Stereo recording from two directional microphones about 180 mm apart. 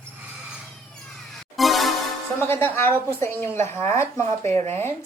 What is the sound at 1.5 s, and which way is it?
Music, centre (ahead or behind).